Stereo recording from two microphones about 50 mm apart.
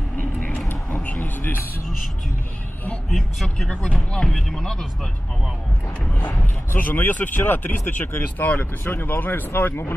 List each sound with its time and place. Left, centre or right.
0.2 s vehicle: left
0.9 s a sound: left
3.1 s speech: centre
3.4 s speech: centre
6.1 s speech: left